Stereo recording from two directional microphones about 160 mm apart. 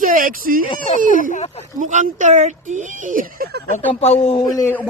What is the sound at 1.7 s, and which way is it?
Speech, 50° right (ahead or behind).